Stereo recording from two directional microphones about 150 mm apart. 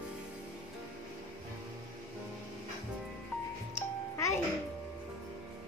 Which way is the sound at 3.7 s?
20° left (ahead or behind).